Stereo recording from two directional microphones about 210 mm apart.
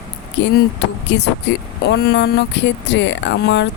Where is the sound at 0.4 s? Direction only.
60° left (ahead or behind).